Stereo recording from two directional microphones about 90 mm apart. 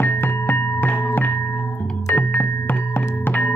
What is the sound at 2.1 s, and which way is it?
Music, 20° left (ahead or behind).